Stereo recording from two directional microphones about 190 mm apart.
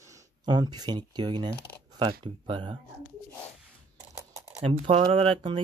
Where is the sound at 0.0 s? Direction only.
15° right (ahead or behind).